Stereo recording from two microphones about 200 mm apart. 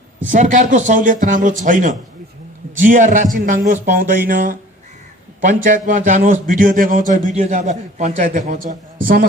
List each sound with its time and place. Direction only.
0.3 s a man's voice: 40° right (ahead or behind)